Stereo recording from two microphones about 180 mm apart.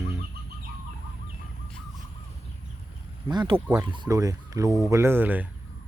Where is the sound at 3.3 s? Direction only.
25° right (ahead or behind).